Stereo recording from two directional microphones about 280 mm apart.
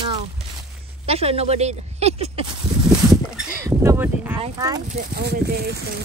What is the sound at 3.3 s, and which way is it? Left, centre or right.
Speech, centre.